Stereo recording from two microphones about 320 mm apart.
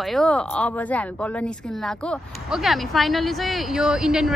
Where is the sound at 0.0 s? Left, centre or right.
Centre.